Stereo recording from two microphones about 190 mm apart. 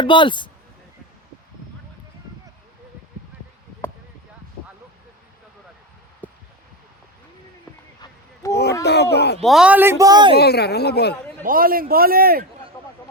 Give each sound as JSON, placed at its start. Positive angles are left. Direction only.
{"t": 0.0, "sound": "speech", "side_deg": 25}
{"t": 6.2, "sound": "a sound", "side_deg": 10}
{"t": 8.0, "sound": "a sound", "side_deg": 15}
{"t": 8.8, "sound": "speech", "side_deg": 60}
{"t": 9.4, "sound": "speech", "side_deg": 0}
{"t": 10.3, "sound": "speech", "side_deg": 55}
{"t": 11.4, "sound": "a man's voice", "side_deg": -50}